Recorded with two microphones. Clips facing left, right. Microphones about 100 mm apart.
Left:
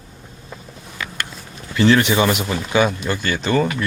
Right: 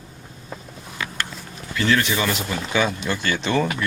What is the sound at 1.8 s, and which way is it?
Speech, 30° left (ahead or behind).